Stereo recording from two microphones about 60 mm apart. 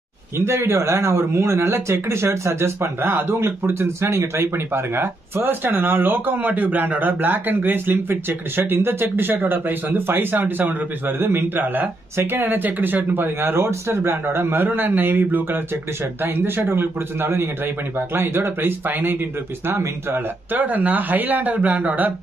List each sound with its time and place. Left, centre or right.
0.4 s speech: right
20.5 s speech: right